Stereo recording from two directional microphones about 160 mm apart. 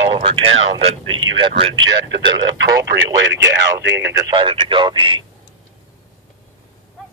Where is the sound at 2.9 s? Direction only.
90° right.